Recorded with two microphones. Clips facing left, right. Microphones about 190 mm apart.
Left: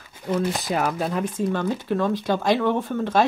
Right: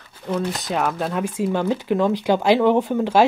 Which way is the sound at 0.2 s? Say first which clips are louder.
Even; 5° left (ahead or behind).